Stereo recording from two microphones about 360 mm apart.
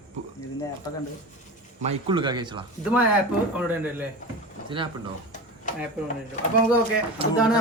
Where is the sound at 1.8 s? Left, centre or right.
Centre.